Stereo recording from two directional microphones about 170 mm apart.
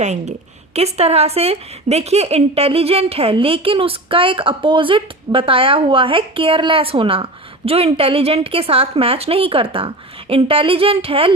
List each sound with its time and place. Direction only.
0.0 s a woman's voice: 40° right (ahead or behind)